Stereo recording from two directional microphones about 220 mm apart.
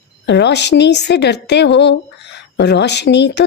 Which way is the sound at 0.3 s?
50° left (ahead or behind).